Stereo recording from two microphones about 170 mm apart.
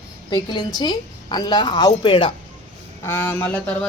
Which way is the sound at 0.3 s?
25° left (ahead or behind).